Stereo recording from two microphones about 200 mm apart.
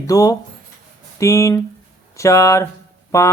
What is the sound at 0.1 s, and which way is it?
Speech, 15° left (ahead or behind).